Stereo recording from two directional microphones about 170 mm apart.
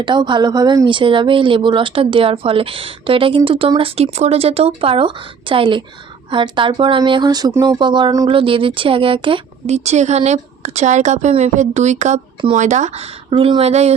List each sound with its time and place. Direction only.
0.0 s speech: 25° right (ahead or behind)